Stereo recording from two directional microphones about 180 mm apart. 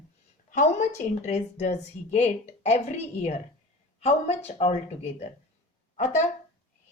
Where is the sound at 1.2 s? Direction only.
40° left (ahead or behind).